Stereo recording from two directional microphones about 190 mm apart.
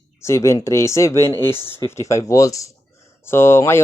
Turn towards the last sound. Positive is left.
turn(degrees=15)  # may be behind; listen again after turning